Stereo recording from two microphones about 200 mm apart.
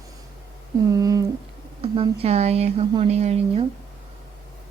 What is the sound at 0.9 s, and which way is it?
Speech, 15° right (ahead or behind).